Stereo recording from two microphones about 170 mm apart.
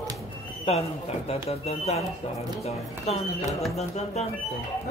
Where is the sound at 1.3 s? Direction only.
35° left (ahead or behind).